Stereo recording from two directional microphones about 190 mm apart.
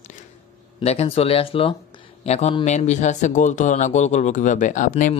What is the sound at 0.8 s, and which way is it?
Speech, 35° left (ahead or behind).